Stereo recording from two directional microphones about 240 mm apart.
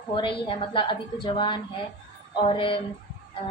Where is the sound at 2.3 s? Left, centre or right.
Centre.